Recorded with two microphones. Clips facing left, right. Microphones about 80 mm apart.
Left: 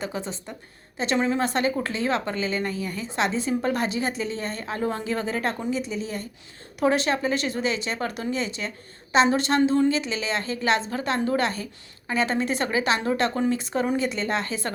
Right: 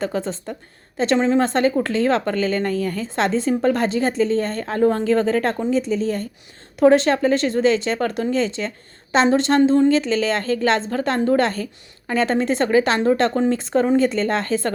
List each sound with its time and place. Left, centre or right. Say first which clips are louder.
0.9 s a woman's voice: right 6 dB; right
2.6 s speech: right 7 dB; centre
3.0 s a woman's voice: right 2 dB; right